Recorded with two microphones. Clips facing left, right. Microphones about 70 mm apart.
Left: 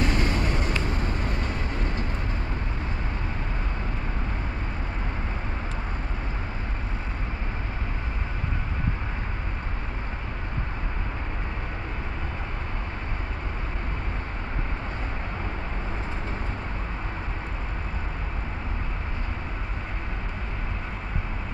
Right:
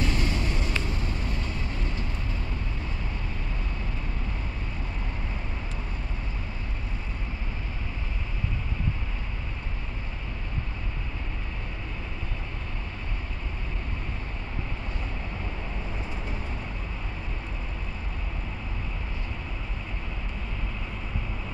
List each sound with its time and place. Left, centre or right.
0.0 s vehicle: left